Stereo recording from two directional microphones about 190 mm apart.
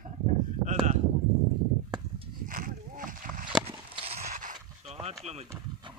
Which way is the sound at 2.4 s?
45° right (ahead or behind).